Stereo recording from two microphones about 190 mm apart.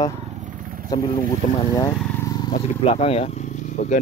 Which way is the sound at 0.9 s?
20° left (ahead or behind).